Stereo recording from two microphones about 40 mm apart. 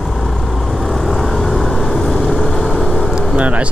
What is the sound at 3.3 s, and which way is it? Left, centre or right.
Vehicle, right.